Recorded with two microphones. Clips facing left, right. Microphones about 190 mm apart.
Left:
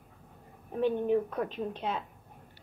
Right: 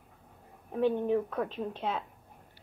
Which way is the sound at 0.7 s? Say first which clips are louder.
Even; centre (ahead or behind).